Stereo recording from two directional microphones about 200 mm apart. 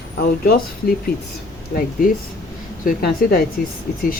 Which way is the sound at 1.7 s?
45° left (ahead or behind).